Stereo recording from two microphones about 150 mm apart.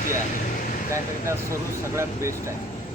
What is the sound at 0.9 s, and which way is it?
Speech, 20° right (ahead or behind).